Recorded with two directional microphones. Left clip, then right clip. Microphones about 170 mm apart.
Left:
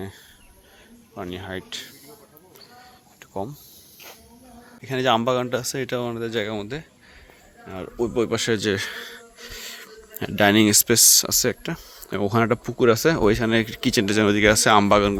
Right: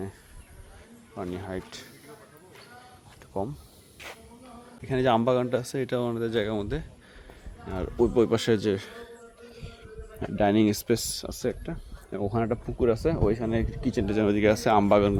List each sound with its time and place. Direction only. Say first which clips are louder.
1.3 s a man's voice: left 3 dB; centre (ahead or behind)
4.8 s speech: left 3 dB; 10° right (ahead or behind)
8.0 s speech: even; 20° right (ahead or behind)
8.7 s speech: left 6 dB; 15° left (ahead or behind); by 15.2 s centre (ahead or behind)